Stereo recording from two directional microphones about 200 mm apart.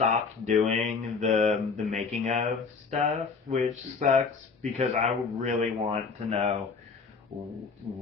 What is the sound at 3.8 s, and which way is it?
Speech, 35° right (ahead or behind).